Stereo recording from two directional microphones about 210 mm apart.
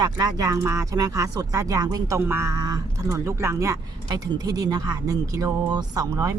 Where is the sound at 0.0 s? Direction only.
15° right (ahead or behind).